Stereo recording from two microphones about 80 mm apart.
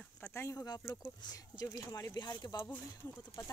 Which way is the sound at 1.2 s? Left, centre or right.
Left.